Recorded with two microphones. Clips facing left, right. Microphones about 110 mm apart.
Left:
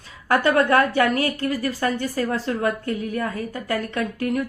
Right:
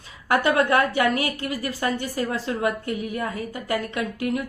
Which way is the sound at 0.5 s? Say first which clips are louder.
Left 4 dB; 40° left (ahead or behind).